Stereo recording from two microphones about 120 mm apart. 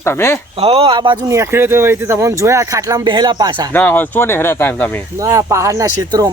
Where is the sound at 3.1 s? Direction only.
40° right (ahead or behind).